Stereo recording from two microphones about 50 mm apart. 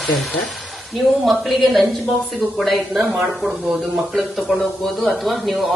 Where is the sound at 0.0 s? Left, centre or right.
Centre.